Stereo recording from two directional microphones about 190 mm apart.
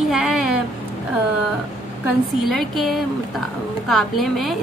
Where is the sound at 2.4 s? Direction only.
Centre (ahead or behind).